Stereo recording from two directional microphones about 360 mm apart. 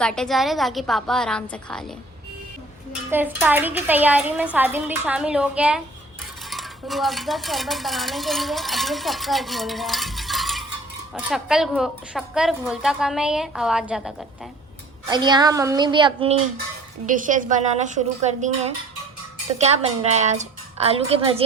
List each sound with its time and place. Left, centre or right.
0.0 s speech: centre
3.1 s speech: centre
6.5 s dishes: centre
11.1 s speech: centre
15.1 s a woman's voice: centre